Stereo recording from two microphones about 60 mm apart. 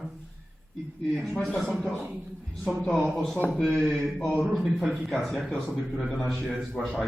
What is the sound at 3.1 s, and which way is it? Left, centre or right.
A man's voice, centre.